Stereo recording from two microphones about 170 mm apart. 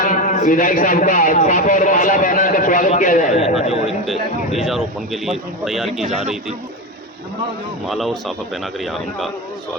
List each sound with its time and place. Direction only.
0.0 s a man's voice: 50° left (ahead or behind)
3.8 s speech: centre (ahead or behind)
7.9 s speech: centre (ahead or behind)